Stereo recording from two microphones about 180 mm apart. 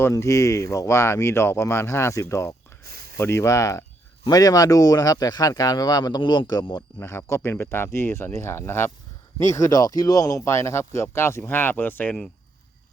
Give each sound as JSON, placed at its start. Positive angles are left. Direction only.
{"t": 0.0, "sound": "speech", "side_deg": 15}
{"t": 2.8, "sound": "a sound", "side_deg": -60}
{"t": 3.2, "sound": "speech", "side_deg": 15}